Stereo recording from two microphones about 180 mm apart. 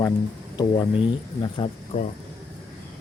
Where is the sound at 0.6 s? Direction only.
25° left (ahead or behind).